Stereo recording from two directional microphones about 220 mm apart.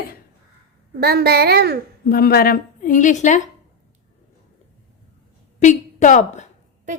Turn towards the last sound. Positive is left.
turn(degrees=35)  # may be behind; listen again after turning